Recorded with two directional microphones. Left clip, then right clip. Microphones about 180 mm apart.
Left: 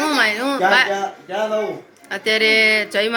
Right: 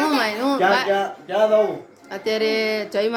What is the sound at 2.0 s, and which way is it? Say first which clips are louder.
Speech: left 5 dB; 5° right (ahead or behind).